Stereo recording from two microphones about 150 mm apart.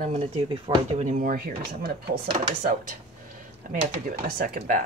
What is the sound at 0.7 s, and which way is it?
Speech, 30° right (ahead or behind).